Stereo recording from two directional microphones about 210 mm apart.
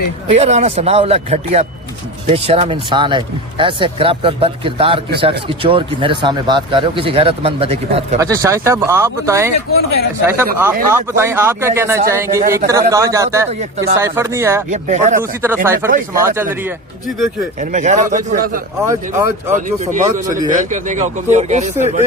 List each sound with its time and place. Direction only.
0.3 s speech: 30° right (ahead or behind)
8.2 s a man's voice: 15° right (ahead or behind)
13.5 s speech: 30° right (ahead or behind)
13.9 s a man's voice: 15° right (ahead or behind)
14.7 s speech: 35° right (ahead or behind)
15.2 s a man's voice: 10° right (ahead or behind)
17.6 s speech: 35° right (ahead or behind)
18.9 s a man's voice: 10° right (ahead or behind)
19.6 s speech: 35° right (ahead or behind)